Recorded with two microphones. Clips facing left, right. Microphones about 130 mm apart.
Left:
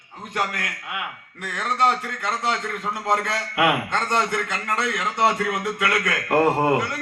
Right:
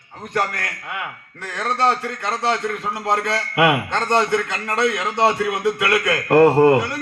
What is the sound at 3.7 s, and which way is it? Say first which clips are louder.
A man's voice: right 4 dB; 25° right (ahead or behind).